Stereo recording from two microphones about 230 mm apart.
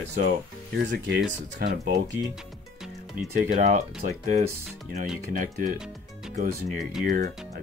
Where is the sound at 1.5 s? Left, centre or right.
Right.